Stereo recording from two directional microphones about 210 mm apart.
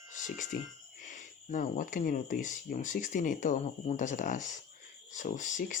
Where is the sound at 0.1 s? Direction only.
35° left (ahead or behind).